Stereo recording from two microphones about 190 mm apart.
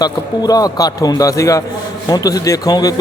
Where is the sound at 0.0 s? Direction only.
20° left (ahead or behind).